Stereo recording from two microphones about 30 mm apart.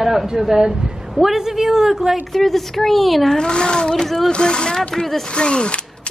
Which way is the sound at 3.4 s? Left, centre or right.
Left.